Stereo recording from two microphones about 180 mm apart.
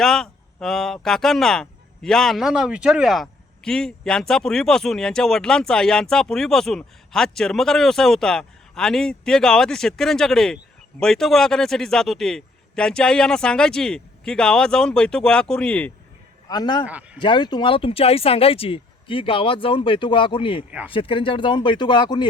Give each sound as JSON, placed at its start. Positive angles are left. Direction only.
{"t": 0.0, "sound": "speech", "side_deg": 0}
{"t": 16.5, "sound": "speech", "side_deg": 25}
{"t": 16.8, "sound": "speech", "side_deg": -10}
{"t": 17.2, "sound": "speech", "side_deg": 25}
{"t": 20.7, "sound": "speech", "side_deg": -10}
{"t": 20.9, "sound": "speech", "side_deg": 30}